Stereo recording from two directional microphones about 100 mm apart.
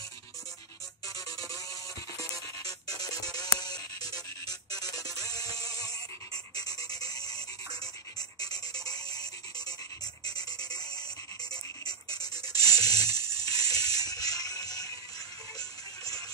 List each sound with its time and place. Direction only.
1.0 s music: 35° left (ahead or behind)